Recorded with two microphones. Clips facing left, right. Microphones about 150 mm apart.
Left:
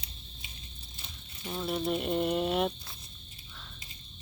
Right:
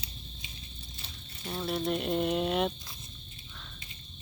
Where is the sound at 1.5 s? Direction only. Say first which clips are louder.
Even; centre (ahead or behind).